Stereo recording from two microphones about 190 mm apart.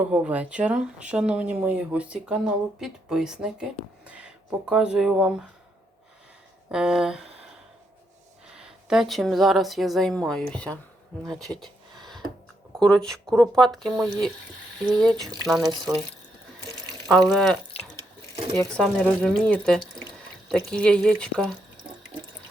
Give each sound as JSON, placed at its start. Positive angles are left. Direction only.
{"t": 0.0, "sound": "speech", "side_deg": -5}
{"t": 6.7, "sound": "speech", "side_deg": -5}
{"t": 8.5, "sound": "speech", "side_deg": 0}
{"t": 11.3, "sound": "a sound", "side_deg": 0}
{"t": 12.8, "sound": "speech", "side_deg": 5}
{"t": 15.6, "sound": "speech", "side_deg": -20}
{"t": 17.1, "sound": "speech", "side_deg": 0}
{"t": 18.7, "sound": "speech", "side_deg": 5}